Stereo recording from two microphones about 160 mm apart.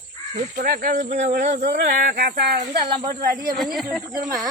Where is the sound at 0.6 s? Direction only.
65° right (ahead or behind); by 2.5 s 85° right.